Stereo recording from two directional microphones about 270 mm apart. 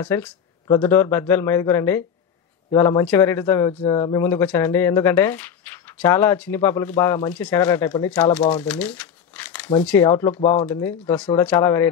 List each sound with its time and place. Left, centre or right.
0.0 s speech: centre
8.6 s crumpling: centre
9.8 s speech: centre
10.4 s speech: left
10.7 s speech: centre